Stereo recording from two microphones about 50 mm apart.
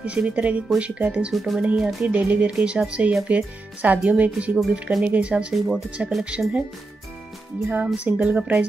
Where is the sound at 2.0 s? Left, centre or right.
Right.